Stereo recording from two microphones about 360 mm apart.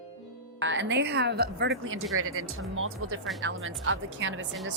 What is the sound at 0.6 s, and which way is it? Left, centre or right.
A woman's voice, right.